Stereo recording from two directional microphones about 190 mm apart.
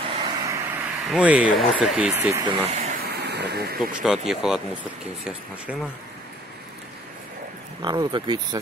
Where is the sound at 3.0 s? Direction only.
60° right (ahead or behind).